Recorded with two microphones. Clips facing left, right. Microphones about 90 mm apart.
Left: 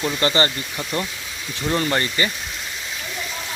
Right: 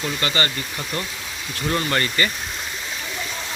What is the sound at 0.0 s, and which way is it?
Speech, 30° left (ahead or behind).